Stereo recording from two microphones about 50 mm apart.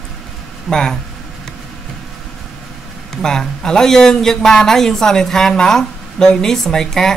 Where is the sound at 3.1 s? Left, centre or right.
Centre.